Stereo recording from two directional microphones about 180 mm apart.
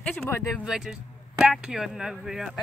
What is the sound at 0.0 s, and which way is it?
Speech, 10° left (ahead or behind).